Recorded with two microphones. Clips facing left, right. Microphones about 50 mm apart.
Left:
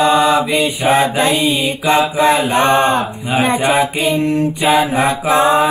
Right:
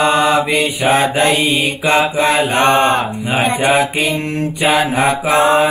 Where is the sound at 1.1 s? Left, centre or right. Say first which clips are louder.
Right 1 dB; right.